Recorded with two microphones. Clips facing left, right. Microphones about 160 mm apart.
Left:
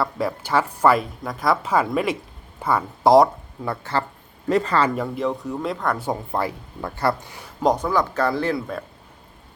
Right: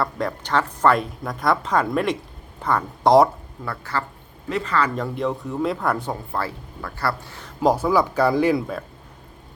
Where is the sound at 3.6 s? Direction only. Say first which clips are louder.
Left 3 dB; 25° left (ahead or behind).